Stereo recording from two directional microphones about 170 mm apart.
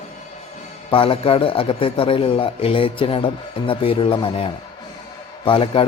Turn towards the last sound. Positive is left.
turn(degrees=30)  # may be behind; listen again after turning